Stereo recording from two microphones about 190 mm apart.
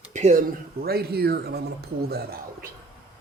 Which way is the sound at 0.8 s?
55° right (ahead or behind).